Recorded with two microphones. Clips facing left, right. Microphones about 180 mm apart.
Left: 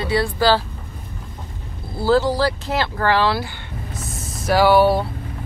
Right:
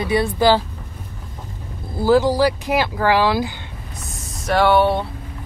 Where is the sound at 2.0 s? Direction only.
15° right (ahead or behind).